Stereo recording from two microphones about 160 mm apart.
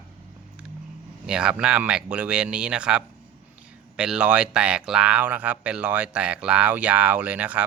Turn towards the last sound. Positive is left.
turn(degrees=-10)  # may be behind; listen again after turning